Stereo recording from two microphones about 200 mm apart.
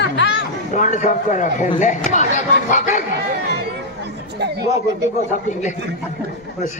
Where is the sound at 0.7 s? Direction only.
40° left (ahead or behind).